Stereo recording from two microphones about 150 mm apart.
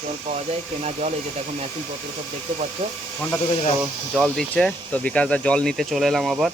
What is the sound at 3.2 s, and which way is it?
Speech, 15° left (ahead or behind).